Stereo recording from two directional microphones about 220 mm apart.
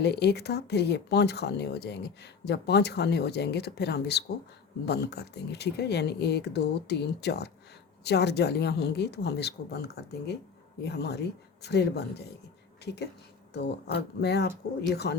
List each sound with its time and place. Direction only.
0.0 s speech: 50° left (ahead or behind)